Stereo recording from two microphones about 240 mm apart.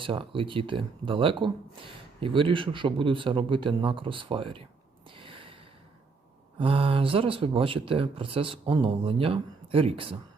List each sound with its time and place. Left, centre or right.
0.0 s speech: right
5.1 s gasp: right
6.6 s speech: right